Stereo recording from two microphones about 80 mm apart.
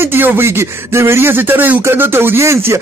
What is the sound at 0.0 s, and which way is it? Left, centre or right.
Speech, right.